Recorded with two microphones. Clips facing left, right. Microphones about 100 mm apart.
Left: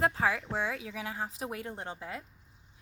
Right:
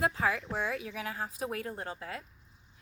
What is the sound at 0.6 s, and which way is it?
A woman's voice, 20° left (ahead or behind).